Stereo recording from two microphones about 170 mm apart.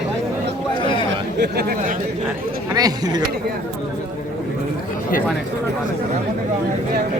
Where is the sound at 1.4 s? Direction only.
65° right (ahead or behind).